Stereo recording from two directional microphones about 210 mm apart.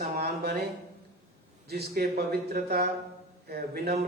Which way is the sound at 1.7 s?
50° right (ahead or behind).